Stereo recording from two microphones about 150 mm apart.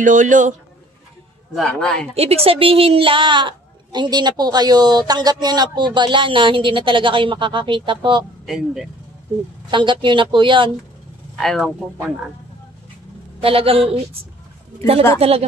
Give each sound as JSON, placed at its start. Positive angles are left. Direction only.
{"t": 0.0, "sound": "speech", "side_deg": -60}
{"t": 1.5, "sound": "speech", "side_deg": 5}
{"t": 2.1, "sound": "a woman's voice", "side_deg": -40}
{"t": 8.5, "sound": "speech", "side_deg": 0}
{"t": 9.7, "sound": "a woman's voice", "side_deg": -30}
{"t": 11.3, "sound": "speech", "side_deg": 0}
{"t": 13.4, "sound": "a woman's voice", "side_deg": -40}
{"t": 15.1, "sound": "a woman's voice", "side_deg": -40}